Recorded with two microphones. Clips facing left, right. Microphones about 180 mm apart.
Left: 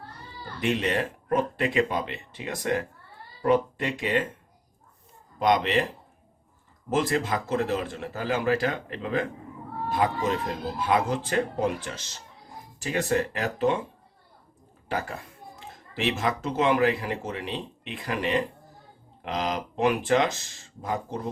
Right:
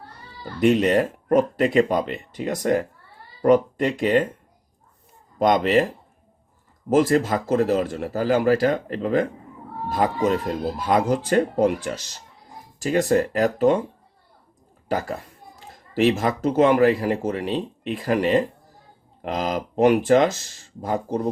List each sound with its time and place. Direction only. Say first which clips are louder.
0.6 s speech: right 8 dB; 40° right (ahead or behind)
5.4 s speech: right 5 dB; 40° right (ahead or behind)
6.9 s speech: right 7 dB; 40° right (ahead or behind)
14.8 s speech: right 5 dB; 40° right (ahead or behind)